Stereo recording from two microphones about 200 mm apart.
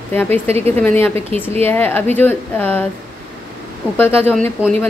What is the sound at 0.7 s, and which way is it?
Speech, 10° left (ahead or behind).